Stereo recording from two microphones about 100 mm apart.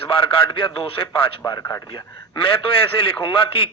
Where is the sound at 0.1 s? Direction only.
60° left (ahead or behind).